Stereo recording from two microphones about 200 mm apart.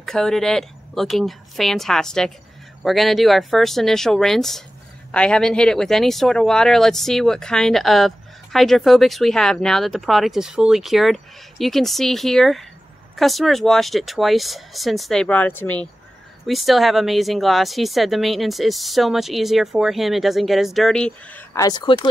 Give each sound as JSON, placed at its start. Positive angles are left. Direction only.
{"t": 0.0, "sound": "speech", "side_deg": 0}